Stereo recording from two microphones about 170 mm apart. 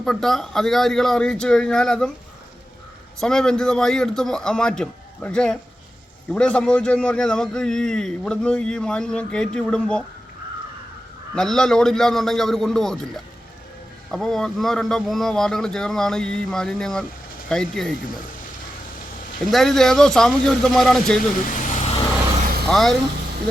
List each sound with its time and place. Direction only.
0.0 s a man's voice: centre (ahead or behind)
3.2 s a man's voice: 5° left (ahead or behind)
11.3 s a man's voice: 5° left (ahead or behind)
14.1 s a man's voice: centre (ahead or behind)
19.5 s a man's voice: centre (ahead or behind)
21.6 s vehicle: 40° left (ahead or behind)
22.6 s speech: centre (ahead or behind)